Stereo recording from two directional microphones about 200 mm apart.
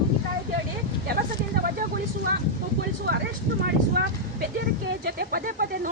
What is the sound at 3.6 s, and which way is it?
A woman's voice, 60° right (ahead or behind).